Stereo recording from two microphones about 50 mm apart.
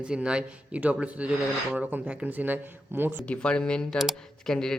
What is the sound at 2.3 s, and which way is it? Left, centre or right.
Speech, right.